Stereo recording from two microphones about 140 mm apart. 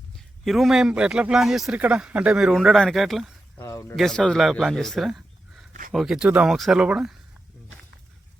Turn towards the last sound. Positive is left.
turn(degrees=-5)  # may be behind; listen again after turning